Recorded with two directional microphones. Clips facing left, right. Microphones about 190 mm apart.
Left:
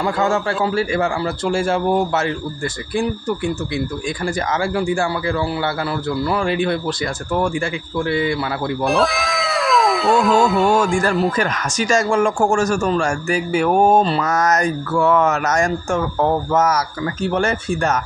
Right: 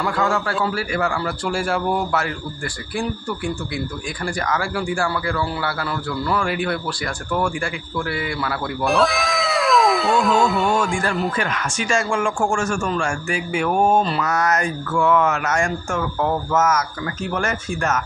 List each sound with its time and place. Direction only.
0.0 s speech: 25° left (ahead or behind)
8.0 s speech: 25° left (ahead or behind)
8.8 s speech: centre (ahead or behind)
11.3 s speech: 40° left (ahead or behind)